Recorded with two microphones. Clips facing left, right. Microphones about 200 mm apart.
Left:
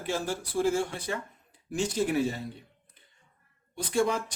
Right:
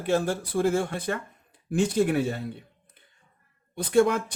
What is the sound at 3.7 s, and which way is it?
Speech, 60° right (ahead or behind).